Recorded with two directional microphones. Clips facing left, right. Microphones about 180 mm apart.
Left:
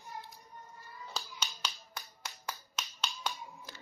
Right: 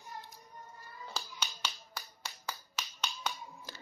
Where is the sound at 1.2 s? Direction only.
Centre (ahead or behind).